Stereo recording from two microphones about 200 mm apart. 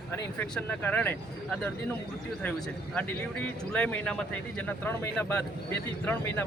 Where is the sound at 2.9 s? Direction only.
5° left (ahead or behind).